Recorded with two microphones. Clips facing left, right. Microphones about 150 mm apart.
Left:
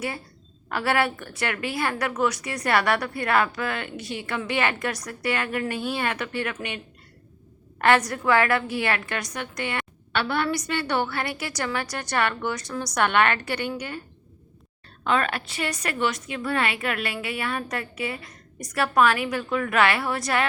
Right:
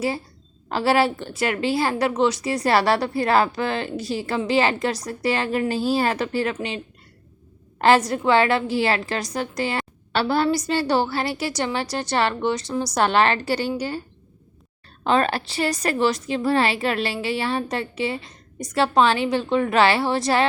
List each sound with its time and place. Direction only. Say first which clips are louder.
0.7 s a woman's voice: right 5 dB; 30° right (ahead or behind)
15.0 s a woman's voice: right 4 dB; 30° right (ahead or behind)